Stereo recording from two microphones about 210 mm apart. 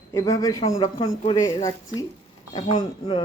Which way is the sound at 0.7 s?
25° left (ahead or behind).